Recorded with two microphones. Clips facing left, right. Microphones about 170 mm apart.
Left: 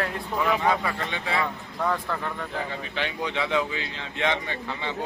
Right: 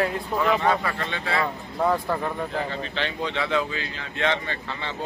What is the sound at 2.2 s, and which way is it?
Speech, 20° right (ahead or behind).